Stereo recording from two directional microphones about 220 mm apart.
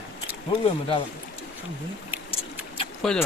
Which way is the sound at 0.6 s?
25° left (ahead or behind).